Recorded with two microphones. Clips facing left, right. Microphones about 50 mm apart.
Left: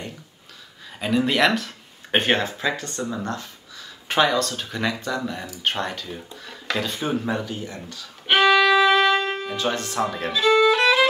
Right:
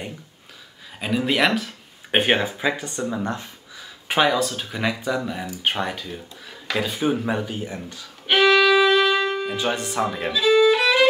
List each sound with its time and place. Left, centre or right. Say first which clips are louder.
0.9 s speech: left 1 dB; centre
8.3 s violin: even; centre
9.4 s speech: right 1 dB; centre